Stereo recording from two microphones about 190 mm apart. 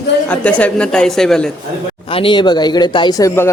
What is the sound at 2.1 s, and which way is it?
Speech, 25° left (ahead or behind).